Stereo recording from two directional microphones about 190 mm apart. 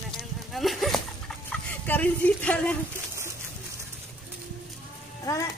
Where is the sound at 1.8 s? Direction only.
10° left (ahead or behind).